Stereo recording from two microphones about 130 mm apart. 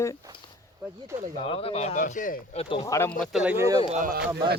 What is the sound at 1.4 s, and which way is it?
Speech, 50° left (ahead or behind).